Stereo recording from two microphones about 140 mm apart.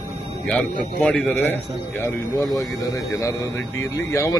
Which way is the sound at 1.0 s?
10° left (ahead or behind).